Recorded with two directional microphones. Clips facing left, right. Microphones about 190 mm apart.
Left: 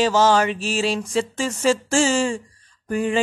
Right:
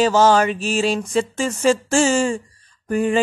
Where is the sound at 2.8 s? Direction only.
50° right (ahead or behind).